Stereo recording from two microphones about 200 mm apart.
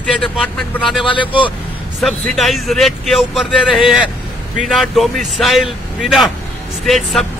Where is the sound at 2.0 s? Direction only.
Centre (ahead or behind).